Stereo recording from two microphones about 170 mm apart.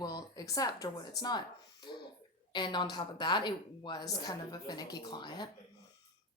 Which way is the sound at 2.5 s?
25° left (ahead or behind).